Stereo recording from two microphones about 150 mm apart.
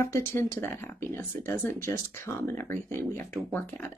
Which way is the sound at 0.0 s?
15° left (ahead or behind).